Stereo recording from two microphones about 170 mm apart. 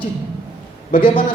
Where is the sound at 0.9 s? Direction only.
30° left (ahead or behind).